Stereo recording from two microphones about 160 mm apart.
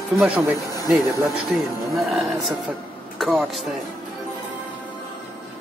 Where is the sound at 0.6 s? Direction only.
20° left (ahead or behind).